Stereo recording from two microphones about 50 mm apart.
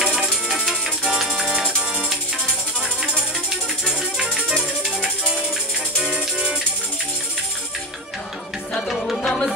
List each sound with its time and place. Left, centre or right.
1.3 s music: centre
3.8 s music: centre
5.9 s music: centre
8.7 s music: centre